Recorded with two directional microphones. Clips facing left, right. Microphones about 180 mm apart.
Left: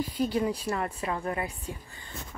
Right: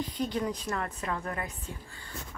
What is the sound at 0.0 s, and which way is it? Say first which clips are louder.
A woman's voice: left 4 dB; 10° left (ahead or behind).